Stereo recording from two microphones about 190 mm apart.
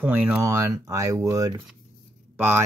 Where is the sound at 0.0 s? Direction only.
10° right (ahead or behind).